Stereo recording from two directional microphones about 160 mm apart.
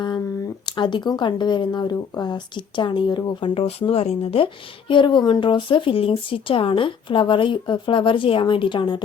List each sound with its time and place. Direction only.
0.6 s speech: 30° left (ahead or behind)